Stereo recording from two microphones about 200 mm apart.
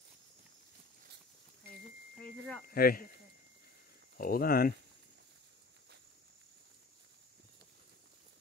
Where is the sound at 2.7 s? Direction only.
45° left (ahead or behind).